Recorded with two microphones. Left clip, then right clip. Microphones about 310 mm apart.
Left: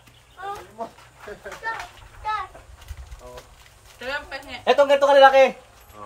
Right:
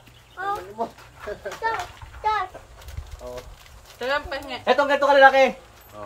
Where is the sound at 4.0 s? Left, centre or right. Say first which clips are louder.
Right 5 dB; centre.